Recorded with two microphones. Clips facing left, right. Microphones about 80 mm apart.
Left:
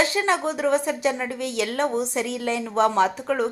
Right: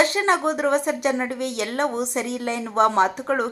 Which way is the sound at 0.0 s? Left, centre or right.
Right.